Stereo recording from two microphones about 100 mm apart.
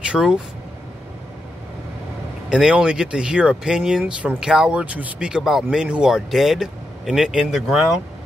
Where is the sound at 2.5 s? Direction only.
5° right (ahead or behind).